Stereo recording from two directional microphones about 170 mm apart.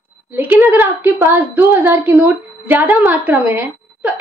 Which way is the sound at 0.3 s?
10° right (ahead or behind).